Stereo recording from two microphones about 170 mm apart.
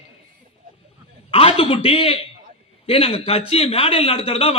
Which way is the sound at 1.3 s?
35° left (ahead or behind).